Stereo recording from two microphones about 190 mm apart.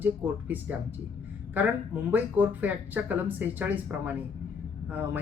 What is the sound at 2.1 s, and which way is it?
A woman's voice, 10° right (ahead or behind).